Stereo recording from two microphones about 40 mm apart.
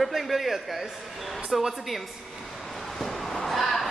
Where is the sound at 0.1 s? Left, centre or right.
Centre.